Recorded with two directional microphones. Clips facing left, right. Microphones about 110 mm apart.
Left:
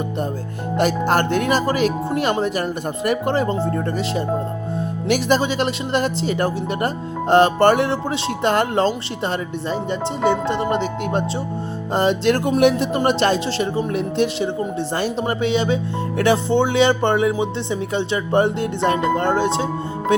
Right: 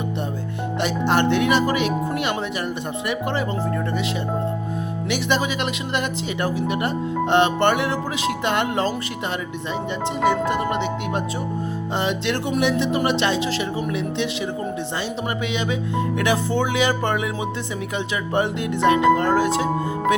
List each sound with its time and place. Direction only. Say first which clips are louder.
0.8 s speech: left 3 dB; 45° left (ahead or behind)
5.0 s speech: left 5 dB; 45° left (ahead or behind)
5.4 s speech: left 4 dB; 35° left (ahead or behind); by 12.9 s 50° left (ahead or behind)
12.9 s speech: left 3 dB; 40° left (ahead or behind)
15.4 s speech: left 5 dB; 35° left (ahead or behind)